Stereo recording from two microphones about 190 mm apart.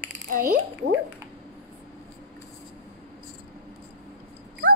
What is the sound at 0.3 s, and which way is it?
Speech, 45° right (ahead or behind).